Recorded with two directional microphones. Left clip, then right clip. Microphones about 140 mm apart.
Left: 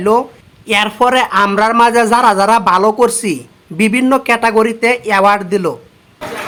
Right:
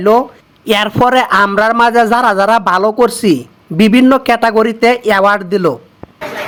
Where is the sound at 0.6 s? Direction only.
40° right (ahead or behind).